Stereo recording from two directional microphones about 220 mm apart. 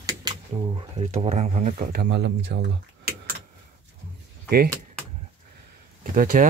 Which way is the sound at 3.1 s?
45° right (ahead or behind).